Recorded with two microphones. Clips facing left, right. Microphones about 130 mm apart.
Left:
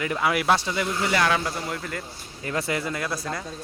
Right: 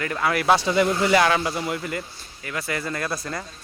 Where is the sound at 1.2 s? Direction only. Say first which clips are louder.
Right 3 dB; 10° right (ahead or behind).